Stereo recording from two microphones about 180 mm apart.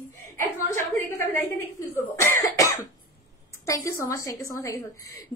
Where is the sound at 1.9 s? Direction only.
10° left (ahead or behind).